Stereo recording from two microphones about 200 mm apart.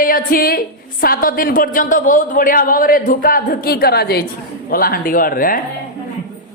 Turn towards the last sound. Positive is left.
turn(degrees=45)  # may be behind; listen again after turning